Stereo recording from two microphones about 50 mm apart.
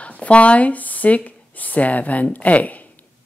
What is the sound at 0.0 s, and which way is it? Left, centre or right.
Speech, left.